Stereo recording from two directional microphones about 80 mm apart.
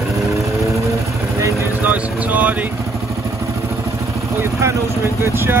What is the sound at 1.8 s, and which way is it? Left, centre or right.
Vehicle, right.